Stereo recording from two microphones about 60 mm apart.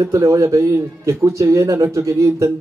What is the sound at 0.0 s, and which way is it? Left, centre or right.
A man's voice, right.